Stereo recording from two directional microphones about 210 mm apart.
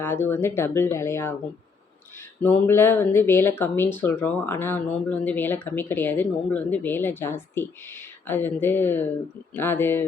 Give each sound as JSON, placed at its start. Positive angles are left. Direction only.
{"t": 0.0, "sound": "speech", "side_deg": 10}
{"t": 2.4, "sound": "speech", "side_deg": 10}